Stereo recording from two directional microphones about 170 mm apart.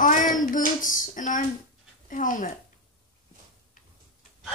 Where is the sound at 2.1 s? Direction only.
50° left (ahead or behind).